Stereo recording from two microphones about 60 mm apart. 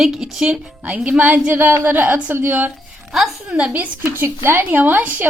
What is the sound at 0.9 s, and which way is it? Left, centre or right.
Speech, right.